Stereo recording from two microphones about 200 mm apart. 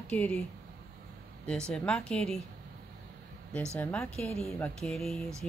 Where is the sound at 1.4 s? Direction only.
5° left (ahead or behind).